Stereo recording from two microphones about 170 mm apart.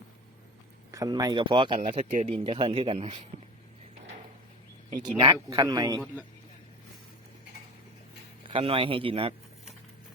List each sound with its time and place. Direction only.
0.9 s a man's voice: 20° right (ahead or behind)
4.9 s a man's voice: 25° right (ahead or behind)
8.4 s speech: 30° right (ahead or behind)